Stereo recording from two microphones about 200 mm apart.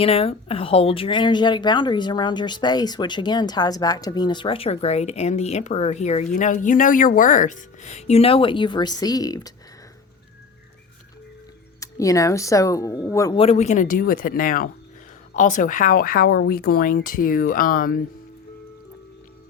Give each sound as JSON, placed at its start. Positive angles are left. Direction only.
{"t": 0.0, "sound": "speech", "side_deg": 30}
{"t": 11.8, "sound": "speech", "side_deg": 15}
{"t": 13.3, "sound": "speech", "side_deg": 30}